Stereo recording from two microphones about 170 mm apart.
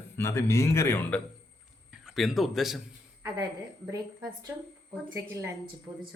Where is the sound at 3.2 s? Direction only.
20° right (ahead or behind).